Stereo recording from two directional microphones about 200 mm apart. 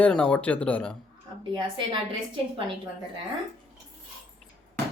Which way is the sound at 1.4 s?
25° right (ahead or behind).